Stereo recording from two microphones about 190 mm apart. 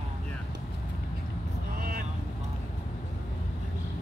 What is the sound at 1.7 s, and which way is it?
Vehicle, 50° right (ahead or behind).